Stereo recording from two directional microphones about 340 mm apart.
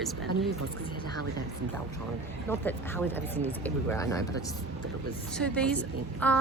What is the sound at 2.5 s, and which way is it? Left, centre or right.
Speech, centre.